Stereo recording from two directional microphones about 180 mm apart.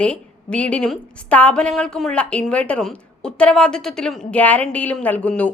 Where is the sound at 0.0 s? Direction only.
5° left (ahead or behind).